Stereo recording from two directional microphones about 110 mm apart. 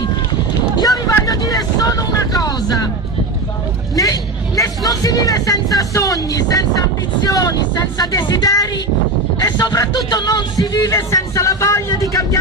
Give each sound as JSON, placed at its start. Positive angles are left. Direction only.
{"t": 0.7, "sound": "vehicle", "side_deg": 35}
{"t": 3.9, "sound": "vehicle", "side_deg": 30}
{"t": 7.2, "sound": "a man's voice", "side_deg": 35}